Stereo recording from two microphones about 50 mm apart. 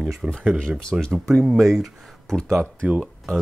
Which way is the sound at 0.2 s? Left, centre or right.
Centre.